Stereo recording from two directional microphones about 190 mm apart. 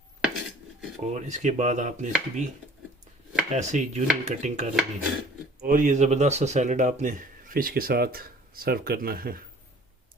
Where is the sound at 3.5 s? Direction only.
40° right (ahead or behind).